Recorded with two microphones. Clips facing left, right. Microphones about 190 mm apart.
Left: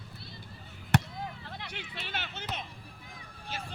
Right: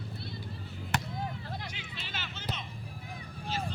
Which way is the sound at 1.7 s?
60° left (ahead or behind).